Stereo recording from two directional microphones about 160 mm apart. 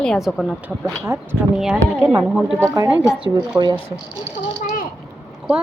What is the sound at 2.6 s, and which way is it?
Speech, 20° right (ahead or behind).